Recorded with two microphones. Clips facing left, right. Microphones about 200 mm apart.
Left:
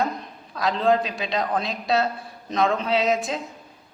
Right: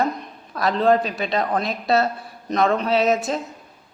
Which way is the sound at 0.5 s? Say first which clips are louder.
Right 3 dB; centre (ahead or behind).